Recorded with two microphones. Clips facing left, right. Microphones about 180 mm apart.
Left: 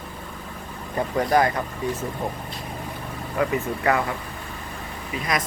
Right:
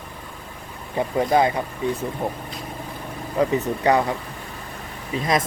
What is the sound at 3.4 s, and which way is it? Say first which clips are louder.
Speech: right 3 dB; 20° right (ahead or behind).